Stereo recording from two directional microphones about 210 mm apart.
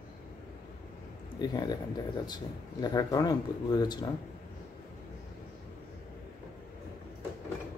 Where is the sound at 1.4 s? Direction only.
20° left (ahead or behind).